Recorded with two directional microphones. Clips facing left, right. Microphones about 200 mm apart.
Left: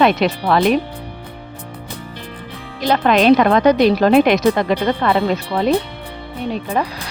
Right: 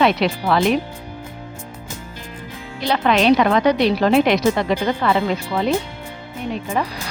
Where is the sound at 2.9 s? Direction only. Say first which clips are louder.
Left 3 dB; 45° left (ahead or behind).